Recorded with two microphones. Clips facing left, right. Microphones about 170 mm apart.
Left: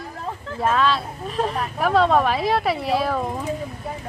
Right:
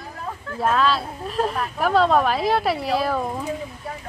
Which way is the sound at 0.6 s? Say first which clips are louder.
Even; centre (ahead or behind).